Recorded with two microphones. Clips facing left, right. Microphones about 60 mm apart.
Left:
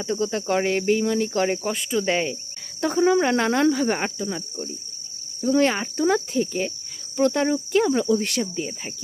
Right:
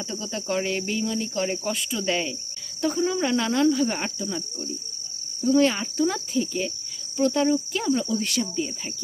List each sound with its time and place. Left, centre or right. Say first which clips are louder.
0.0 s cricket: left 7 dB; left
1.6 s speech: left 3 dB; left
2.8 s cricket: left 5 dB; left
5.4 s speech: even; left
7.2 s cricket: left 1 dB; left
8.5 s speech: right 1 dB; left